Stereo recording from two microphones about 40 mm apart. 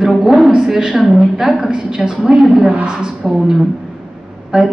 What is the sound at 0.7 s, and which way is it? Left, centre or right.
A woman's voice, centre.